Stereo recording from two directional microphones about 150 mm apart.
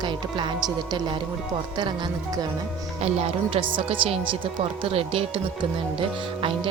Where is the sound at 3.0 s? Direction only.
40° right (ahead or behind).